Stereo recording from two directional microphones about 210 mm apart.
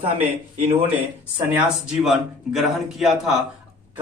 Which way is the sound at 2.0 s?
Centre (ahead or behind).